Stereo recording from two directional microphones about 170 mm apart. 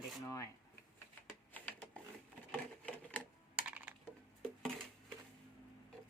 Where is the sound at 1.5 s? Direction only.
10° left (ahead or behind).